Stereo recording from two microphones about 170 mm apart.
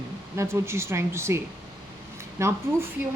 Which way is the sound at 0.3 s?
15° right (ahead or behind).